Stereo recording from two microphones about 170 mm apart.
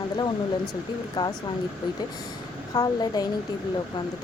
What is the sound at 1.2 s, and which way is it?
Speech, 20° left (ahead or behind).